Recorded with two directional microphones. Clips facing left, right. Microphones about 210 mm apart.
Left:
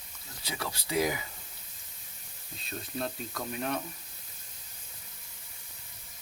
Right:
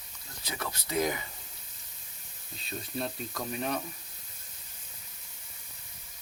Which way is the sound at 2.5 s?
Centre (ahead or behind).